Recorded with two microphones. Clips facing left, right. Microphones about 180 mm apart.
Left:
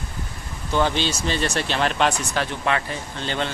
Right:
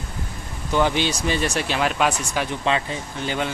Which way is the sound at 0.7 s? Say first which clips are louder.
Right 1 dB; 15° right (ahead or behind).